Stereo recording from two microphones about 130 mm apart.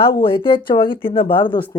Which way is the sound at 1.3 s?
40° left (ahead or behind).